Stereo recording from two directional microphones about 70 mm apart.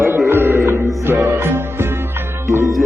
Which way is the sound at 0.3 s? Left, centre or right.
Right.